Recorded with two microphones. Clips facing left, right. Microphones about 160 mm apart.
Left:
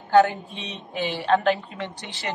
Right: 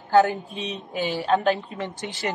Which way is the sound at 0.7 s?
40° right (ahead or behind).